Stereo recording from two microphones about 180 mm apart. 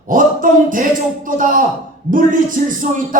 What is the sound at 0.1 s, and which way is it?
A man's voice, 50° right (ahead or behind).